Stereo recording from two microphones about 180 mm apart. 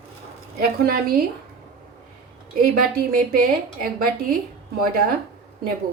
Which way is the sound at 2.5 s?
55° right (ahead or behind).